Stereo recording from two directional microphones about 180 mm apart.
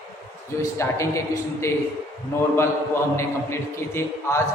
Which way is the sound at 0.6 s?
15° left (ahead or behind).